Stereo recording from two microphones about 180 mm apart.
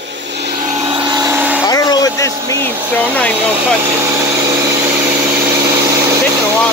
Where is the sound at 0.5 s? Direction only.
45° right (ahead or behind).